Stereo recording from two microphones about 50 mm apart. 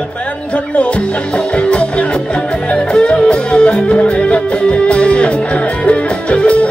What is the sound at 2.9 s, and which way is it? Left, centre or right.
Music, left.